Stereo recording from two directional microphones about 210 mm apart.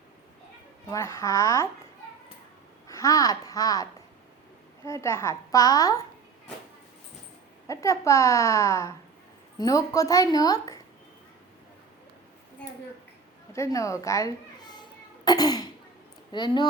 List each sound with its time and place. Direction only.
0.9 s a woman's voice: 15° left (ahead or behind)
2.8 s a child's voice: 15° left (ahead or behind)
4.9 s a woman's voice: 15° left (ahead or behind)
7.7 s a woman's voice: 15° left (ahead or behind)
13.5 s a sound: 15° left (ahead or behind)
16.3 s speech: 20° left (ahead or behind)